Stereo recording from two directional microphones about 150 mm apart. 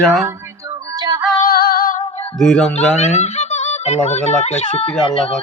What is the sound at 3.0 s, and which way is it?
A child's voice, 50° left (ahead or behind).